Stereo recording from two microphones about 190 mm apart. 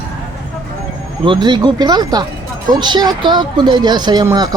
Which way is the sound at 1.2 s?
25° right (ahead or behind).